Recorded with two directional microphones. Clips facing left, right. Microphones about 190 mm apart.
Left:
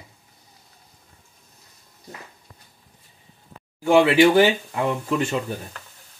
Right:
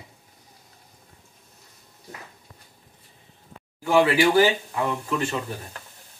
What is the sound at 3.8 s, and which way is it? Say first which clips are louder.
Speech: left 4 dB; 25° left (ahead or behind).